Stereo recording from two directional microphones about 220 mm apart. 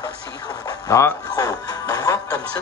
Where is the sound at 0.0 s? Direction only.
15° left (ahead or behind).